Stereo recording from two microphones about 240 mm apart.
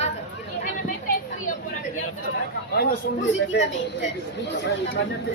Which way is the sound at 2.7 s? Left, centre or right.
Left.